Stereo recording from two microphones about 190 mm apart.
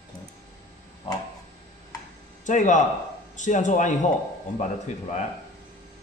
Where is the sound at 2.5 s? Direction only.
40° left (ahead or behind).